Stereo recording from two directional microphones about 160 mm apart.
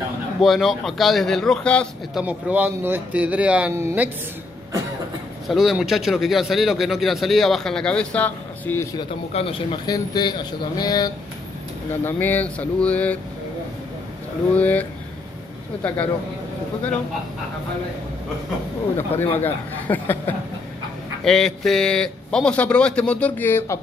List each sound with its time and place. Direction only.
0.4 s speech: centre (ahead or behind)
2.2 s speech: 10° right (ahead or behind)
5.5 s speech: centre (ahead or behind)
9.3 s speech: 35° left (ahead or behind)
9.8 s speech: 25° left (ahead or behind)
12.0 s speech: 15° left (ahead or behind)
14.5 s speech: 10° left (ahead or behind)
18.9 s speech: 15° left (ahead or behind)